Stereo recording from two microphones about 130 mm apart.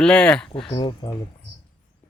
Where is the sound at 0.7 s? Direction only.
35° left (ahead or behind).